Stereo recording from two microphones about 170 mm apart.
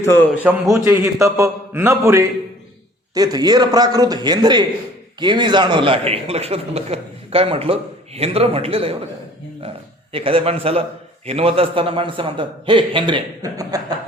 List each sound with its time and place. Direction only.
0.0 s a man's voice: 15° left (ahead or behind)
0.7 s a man's voice: 15° right (ahead or behind)